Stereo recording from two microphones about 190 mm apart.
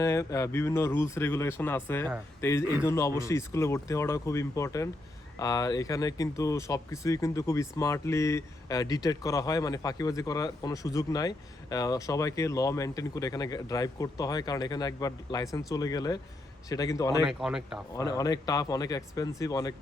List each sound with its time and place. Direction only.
0.0 s speech: 15° left (ahead or behind)
17.2 s speech: 5° right (ahead or behind)
17.9 s speech: 20° left (ahead or behind)